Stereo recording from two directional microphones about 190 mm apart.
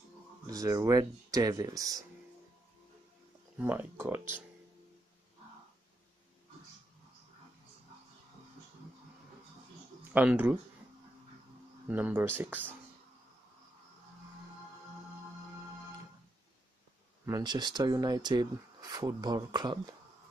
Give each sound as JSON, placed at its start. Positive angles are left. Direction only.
{"t": 0.5, "sound": "speech", "side_deg": -20}
{"t": 3.5, "sound": "speech", "side_deg": -10}
{"t": 10.1, "sound": "speech", "side_deg": -10}
{"t": 11.9, "sound": "speech", "side_deg": -10}
{"t": 17.3, "sound": "speech", "side_deg": -20}